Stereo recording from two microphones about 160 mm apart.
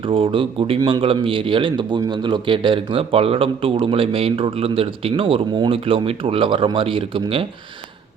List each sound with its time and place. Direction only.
0.1 s a man's voice: 35° right (ahead or behind)